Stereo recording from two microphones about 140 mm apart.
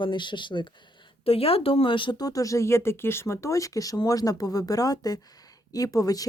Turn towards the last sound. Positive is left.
turn(degrees=25)  # may be behind; listen again after turning